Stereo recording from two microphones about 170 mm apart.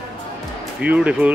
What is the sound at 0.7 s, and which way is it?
Speech, 10° right (ahead or behind).